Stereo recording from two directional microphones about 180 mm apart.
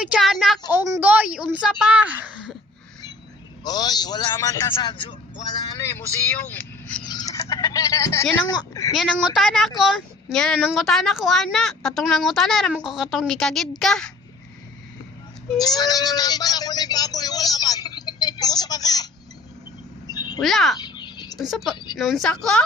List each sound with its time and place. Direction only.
0.0 s a woman's voice: centre (ahead or behind)
0.7 s a woman's voice: 10° right (ahead or behind)
3.6 s a man's voice: 20° left (ahead or behind)
7.1 s speech: 20° left (ahead or behind)
9.3 s a woman's voice: centre (ahead or behind)
15.5 s speech: 20° left (ahead or behind)
20.1 s bird: 20° left (ahead or behind)
20.4 s a woman's voice: centre (ahead or behind)
20.7 s bird: 25° left (ahead or behind)
21.3 s a woman's voice: centre (ahead or behind)